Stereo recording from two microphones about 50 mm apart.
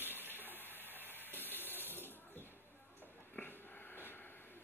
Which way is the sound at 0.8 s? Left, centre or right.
Right.